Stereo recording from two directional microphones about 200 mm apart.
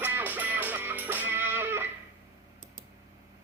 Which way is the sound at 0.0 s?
10° right (ahead or behind).